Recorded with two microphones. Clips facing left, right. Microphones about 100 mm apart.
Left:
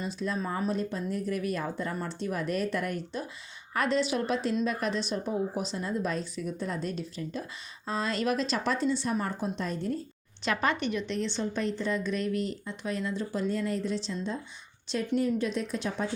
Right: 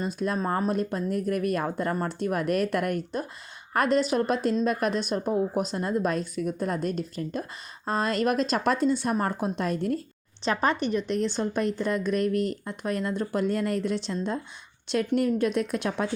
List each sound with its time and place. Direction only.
0.0 s a woman's voice: 50° right (ahead or behind)
10.4 s a woman's voice: 35° right (ahead or behind); by 16.0 s 65° right (ahead or behind)